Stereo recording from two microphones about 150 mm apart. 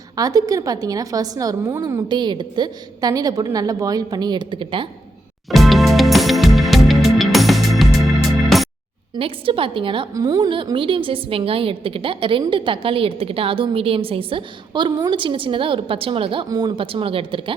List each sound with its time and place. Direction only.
0.2 s a woman's voice: 25° right (ahead or behind)
5.5 s music: centre (ahead or behind)
9.1 s a woman's voice: 40° right (ahead or behind)